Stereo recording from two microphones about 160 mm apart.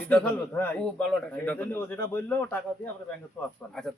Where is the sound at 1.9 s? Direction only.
25° left (ahead or behind).